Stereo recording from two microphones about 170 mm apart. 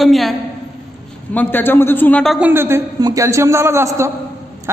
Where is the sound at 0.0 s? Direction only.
Centre (ahead or behind).